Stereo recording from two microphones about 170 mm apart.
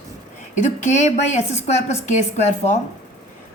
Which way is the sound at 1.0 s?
40° left (ahead or behind).